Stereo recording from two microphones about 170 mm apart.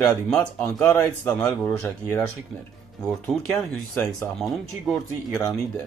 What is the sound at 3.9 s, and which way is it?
Speech, 15° left (ahead or behind).